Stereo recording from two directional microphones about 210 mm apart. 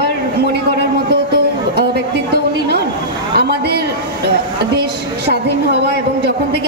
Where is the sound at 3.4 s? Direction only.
50° right (ahead or behind).